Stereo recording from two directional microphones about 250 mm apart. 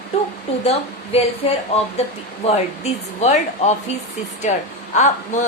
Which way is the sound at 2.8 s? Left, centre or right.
Left.